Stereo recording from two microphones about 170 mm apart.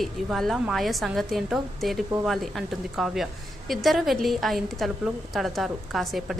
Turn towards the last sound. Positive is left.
turn(degrees=0)  # may be behind; listen again after turning